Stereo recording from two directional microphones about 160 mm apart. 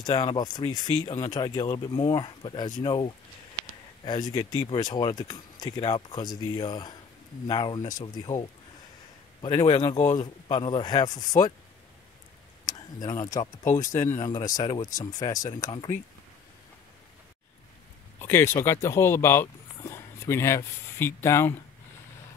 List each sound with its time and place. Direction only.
0.0 s a man's voice: 25° left (ahead or behind)
12.6 s speech: 25° left (ahead or behind)
18.2 s speech: 15° left (ahead or behind)